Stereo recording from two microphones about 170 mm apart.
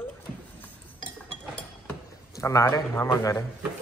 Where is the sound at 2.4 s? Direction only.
20° left (ahead or behind).